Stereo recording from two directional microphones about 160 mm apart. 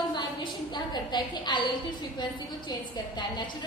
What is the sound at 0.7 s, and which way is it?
Speech, 25° left (ahead or behind).